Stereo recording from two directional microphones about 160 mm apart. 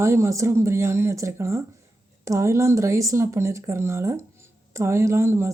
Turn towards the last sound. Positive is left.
turn(degrees=-15)  # may be behind; listen again after turning